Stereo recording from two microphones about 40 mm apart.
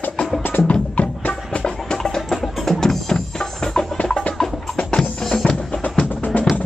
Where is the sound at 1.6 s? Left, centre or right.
Centre.